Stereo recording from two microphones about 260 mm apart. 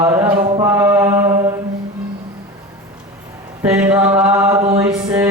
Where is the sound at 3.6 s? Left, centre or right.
Centre.